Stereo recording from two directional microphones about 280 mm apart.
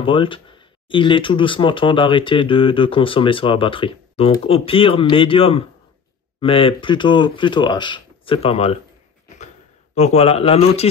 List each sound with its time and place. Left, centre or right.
0.0 s speech: centre
9.9 s a man's voice: left